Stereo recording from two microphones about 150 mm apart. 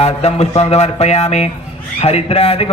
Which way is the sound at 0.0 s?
45° left (ahead or behind).